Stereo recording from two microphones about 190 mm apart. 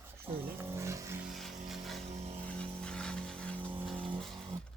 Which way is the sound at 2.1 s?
35° right (ahead or behind).